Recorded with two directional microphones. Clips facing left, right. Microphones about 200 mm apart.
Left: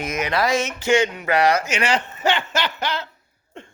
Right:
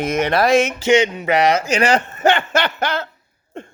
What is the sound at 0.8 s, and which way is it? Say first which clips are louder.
Speech: right 4 dB; 20° right (ahead or behind).